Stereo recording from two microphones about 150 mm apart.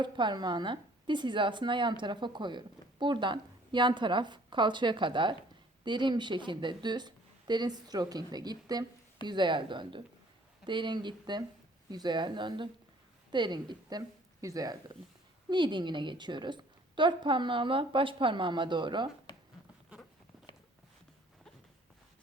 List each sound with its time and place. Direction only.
0.0 s a woman's voice: 30° right (ahead or behind)